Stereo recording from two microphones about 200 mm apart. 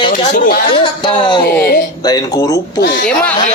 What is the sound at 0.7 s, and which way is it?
Speech, 25° left (ahead or behind).